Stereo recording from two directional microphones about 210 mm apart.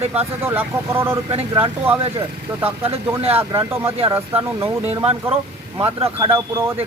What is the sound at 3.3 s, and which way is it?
Speech, 15° right (ahead or behind).